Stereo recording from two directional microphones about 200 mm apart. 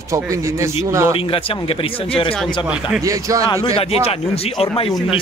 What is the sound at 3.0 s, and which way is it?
Speech, 15° right (ahead or behind).